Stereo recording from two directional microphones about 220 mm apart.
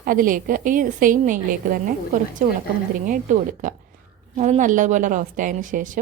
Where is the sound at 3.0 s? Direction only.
35° right (ahead or behind).